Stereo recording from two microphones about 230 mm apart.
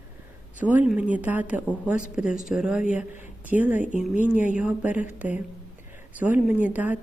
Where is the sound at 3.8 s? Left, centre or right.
Left.